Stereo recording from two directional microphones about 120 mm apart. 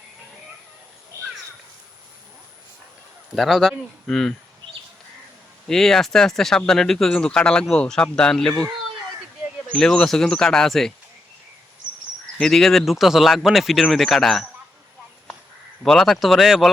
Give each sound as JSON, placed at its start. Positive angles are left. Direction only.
{"t": 1.1, "sound": "crow", "side_deg": -25}
{"t": 3.3, "sound": "speech", "side_deg": 0}
{"t": 5.6, "sound": "speech", "side_deg": 5}
{"t": 9.7, "sound": "speech", "side_deg": 5}
{"t": 12.4, "sound": "speech", "side_deg": 5}
{"t": 15.8, "sound": "speech", "side_deg": 5}